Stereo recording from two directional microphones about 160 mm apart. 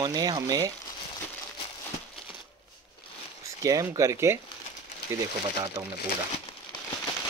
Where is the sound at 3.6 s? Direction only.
20° right (ahead or behind).